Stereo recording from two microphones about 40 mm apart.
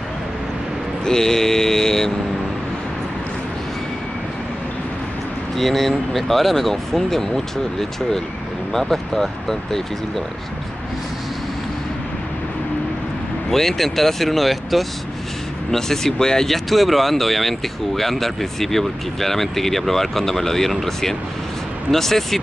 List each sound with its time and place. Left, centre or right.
1.0 s speech: centre
5.6 s speech: centre
13.5 s speech: centre
16.5 s speech: centre